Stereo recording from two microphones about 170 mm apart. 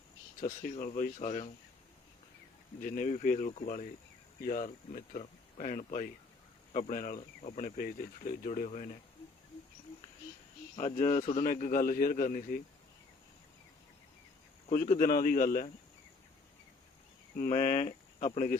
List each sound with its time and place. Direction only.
0.3 s speech: 55° left (ahead or behind)
2.8 s a man's voice: 55° left (ahead or behind)
10.8 s speech: 45° left (ahead or behind)
11.4 s a man's voice: 55° left (ahead or behind)
14.7 s a man's voice: 50° left (ahead or behind)
17.3 s a man's voice: 55° left (ahead or behind)
17.8 s speech: 40° left (ahead or behind)